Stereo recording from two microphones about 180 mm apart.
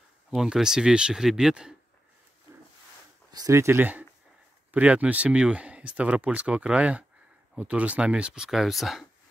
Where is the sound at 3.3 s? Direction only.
20° right (ahead or behind).